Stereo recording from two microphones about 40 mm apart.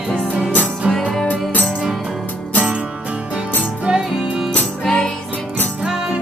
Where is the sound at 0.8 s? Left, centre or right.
Centre.